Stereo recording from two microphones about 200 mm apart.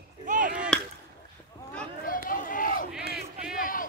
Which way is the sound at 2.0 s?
45° left (ahead or behind).